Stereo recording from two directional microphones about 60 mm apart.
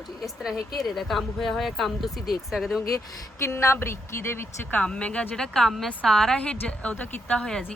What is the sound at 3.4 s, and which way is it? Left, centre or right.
Speech, left.